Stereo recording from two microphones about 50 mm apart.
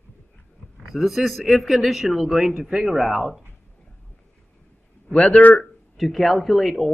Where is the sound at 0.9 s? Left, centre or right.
Centre.